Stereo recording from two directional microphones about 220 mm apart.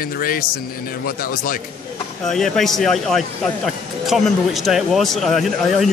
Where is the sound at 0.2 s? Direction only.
40° left (ahead or behind).